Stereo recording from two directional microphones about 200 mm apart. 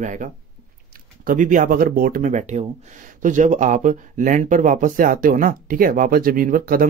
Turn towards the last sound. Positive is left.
turn(degrees=-45)  # may be behind; listen again after turning